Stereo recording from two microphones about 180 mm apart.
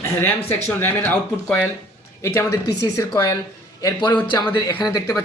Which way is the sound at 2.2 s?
15° left (ahead or behind).